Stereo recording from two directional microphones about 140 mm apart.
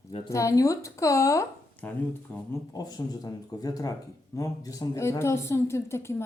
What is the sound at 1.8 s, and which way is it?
Speech, 10° left (ahead or behind).